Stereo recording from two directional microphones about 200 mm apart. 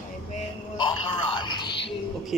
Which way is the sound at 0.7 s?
25° left (ahead or behind).